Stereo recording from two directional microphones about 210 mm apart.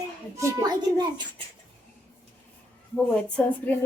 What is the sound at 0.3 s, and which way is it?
Speech, 15° right (ahead or behind).